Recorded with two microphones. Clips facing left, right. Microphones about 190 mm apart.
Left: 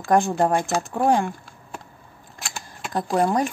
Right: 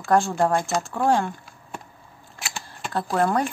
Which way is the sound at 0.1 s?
20° left (ahead or behind).